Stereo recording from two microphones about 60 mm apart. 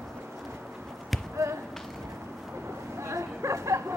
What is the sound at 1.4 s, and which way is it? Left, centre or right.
Speech, right.